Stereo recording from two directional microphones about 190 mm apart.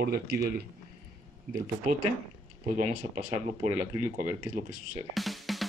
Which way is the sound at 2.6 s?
35° right (ahead or behind).